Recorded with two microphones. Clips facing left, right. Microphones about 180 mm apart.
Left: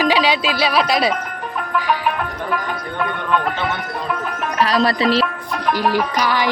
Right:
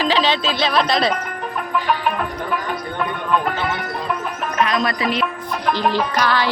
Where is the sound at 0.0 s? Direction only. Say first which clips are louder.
Left 2 dB; 10° left (ahead or behind).